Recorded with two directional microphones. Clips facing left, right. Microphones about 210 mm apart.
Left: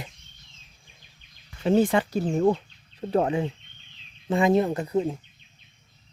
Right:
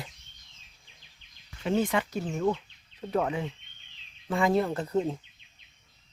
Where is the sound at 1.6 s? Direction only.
35° left (ahead or behind); by 5.2 s 5° left (ahead or behind).